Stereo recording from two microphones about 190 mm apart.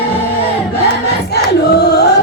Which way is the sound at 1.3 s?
60° left (ahead or behind).